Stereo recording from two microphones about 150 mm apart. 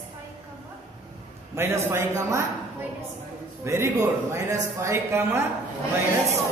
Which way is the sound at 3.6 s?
20° right (ahead or behind).